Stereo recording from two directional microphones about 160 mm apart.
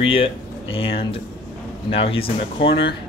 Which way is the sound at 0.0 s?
35° left (ahead or behind).